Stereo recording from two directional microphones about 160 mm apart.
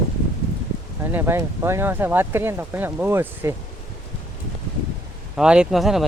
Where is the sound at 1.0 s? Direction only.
15° right (ahead or behind).